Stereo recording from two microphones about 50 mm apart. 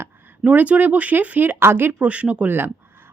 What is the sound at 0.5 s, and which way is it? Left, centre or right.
Speech, right.